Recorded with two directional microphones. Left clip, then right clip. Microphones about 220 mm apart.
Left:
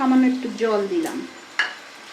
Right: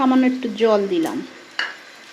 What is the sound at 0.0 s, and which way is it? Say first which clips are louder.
Speech: right 2 dB; 35° right (ahead or behind).